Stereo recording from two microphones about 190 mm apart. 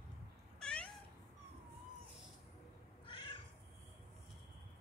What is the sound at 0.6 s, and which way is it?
Cat, 5° left (ahead or behind).